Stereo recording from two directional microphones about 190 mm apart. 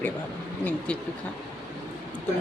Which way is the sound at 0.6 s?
10° left (ahead or behind).